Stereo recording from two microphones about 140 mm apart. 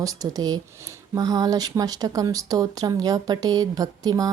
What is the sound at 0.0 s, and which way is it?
Speech, 25° right (ahead or behind).